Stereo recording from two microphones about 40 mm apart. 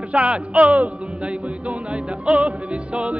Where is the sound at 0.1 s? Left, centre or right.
Right.